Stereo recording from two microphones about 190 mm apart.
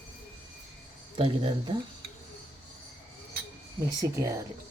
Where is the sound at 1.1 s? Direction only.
30° right (ahead or behind).